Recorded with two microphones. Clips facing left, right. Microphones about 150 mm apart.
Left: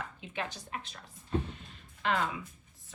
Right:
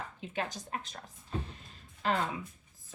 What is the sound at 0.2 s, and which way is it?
A woman's voice, 40° right (ahead or behind).